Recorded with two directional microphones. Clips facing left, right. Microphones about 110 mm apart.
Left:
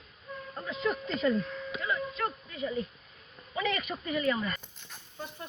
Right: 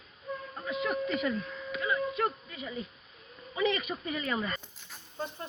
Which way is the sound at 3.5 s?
20° right (ahead or behind).